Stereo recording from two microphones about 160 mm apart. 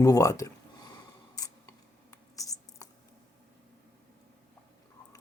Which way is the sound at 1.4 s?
20° left (ahead or behind).